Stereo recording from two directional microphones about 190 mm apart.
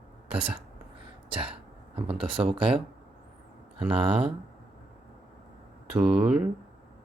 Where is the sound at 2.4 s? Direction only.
25° right (ahead or behind).